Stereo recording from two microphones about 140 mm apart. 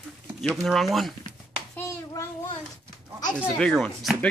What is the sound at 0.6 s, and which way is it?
Speech, centre (ahead or behind).